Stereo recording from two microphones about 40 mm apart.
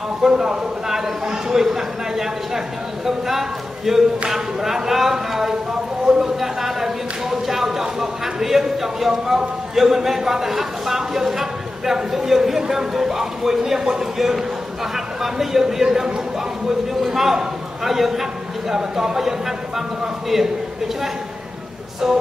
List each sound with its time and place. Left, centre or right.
0.2 s a man's voice: centre
6.0 s a sound: centre
6.4 s a sound: centre
7.8 s a man's voice: centre
20.3 s a man's voice: centre
22.0 s a man's voice: centre